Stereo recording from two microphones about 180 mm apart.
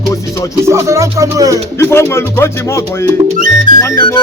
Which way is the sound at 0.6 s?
15° right (ahead or behind).